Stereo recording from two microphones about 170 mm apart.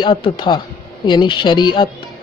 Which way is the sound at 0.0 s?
30° left (ahead or behind).